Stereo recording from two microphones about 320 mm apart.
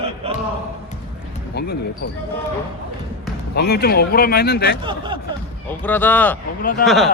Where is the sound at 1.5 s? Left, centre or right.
Left.